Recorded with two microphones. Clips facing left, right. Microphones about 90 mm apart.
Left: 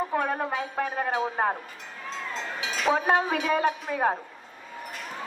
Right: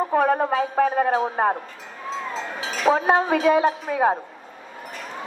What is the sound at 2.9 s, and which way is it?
Speech, 30° right (ahead or behind).